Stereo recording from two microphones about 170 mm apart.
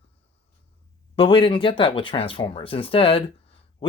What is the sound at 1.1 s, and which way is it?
Speech, 30° left (ahead or behind).